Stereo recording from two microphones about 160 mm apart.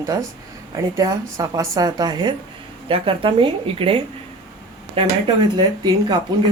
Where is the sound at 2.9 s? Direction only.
35° right (ahead or behind).